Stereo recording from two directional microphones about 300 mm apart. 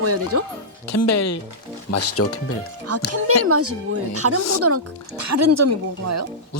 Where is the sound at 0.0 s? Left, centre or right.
Right.